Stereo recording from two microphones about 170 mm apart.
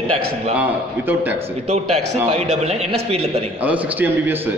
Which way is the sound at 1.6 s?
40° right (ahead or behind).